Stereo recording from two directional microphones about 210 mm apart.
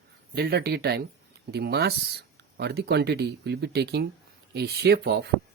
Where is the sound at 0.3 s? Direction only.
50° right (ahead or behind).